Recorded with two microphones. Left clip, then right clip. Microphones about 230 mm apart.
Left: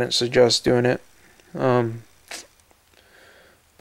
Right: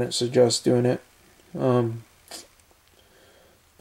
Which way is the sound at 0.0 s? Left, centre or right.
Centre.